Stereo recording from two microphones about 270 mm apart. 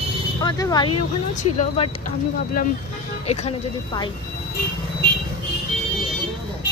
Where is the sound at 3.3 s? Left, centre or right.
Centre.